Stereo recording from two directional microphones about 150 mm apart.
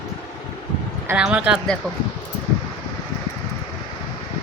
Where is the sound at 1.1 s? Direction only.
5° right (ahead or behind).